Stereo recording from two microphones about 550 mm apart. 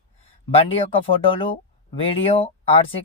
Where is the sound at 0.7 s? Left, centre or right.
Centre.